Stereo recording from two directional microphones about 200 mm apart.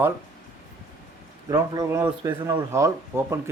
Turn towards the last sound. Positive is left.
turn(degrees=-15)  # may be behind; listen again after turning